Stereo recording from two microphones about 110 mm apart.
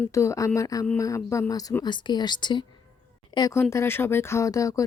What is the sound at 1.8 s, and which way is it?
Speech, 45° left (ahead or behind).